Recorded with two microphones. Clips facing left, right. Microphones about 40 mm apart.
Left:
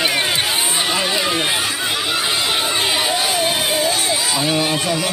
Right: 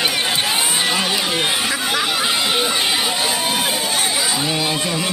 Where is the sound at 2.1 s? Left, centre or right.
Centre.